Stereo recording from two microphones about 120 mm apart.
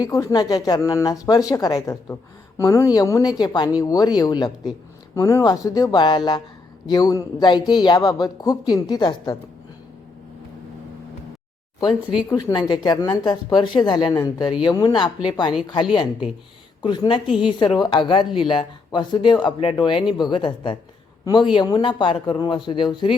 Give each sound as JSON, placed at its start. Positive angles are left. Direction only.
{"t": 0.0, "sound": "speech", "side_deg": 30}
{"t": 12.3, "sound": "speech", "side_deg": 30}